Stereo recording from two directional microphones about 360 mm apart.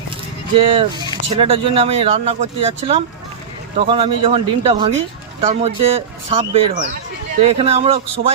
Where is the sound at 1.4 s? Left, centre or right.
Centre.